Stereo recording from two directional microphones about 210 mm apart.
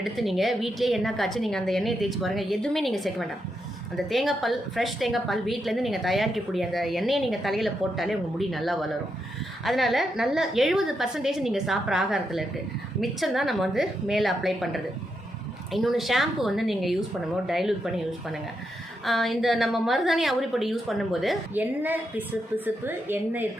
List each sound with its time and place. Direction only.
0.0 s a woman's voice: centre (ahead or behind)